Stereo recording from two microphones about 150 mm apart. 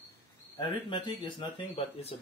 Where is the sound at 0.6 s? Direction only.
30° left (ahead or behind).